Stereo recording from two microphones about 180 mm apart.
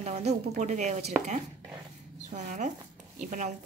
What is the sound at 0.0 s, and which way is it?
Speech, 35° right (ahead or behind).